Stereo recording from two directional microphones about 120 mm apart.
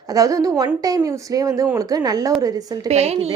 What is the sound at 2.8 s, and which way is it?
Speech, 60° right (ahead or behind).